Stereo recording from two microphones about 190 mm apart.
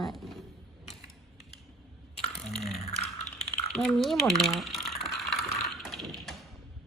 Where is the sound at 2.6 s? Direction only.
35° left (ahead or behind).